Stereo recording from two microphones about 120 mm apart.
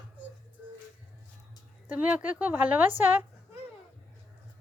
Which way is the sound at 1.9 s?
10° right (ahead or behind).